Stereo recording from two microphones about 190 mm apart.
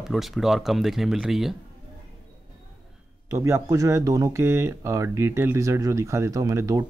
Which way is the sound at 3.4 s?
15° right (ahead or behind).